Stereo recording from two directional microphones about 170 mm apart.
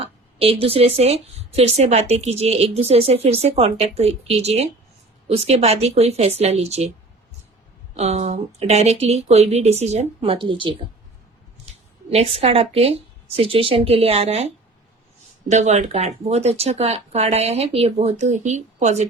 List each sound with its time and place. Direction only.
0.0 s speech: 35° right (ahead or behind)
7.9 s speech: 40° right (ahead or behind)
11.7 s a sound: 40° right (ahead or behind)
12.1 s speech: 35° right (ahead or behind)